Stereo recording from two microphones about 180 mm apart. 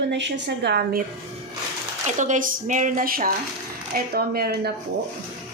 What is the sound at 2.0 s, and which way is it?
A woman's voice, 45° right (ahead or behind).